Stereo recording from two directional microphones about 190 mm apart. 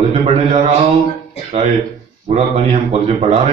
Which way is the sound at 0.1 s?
35° right (ahead or behind).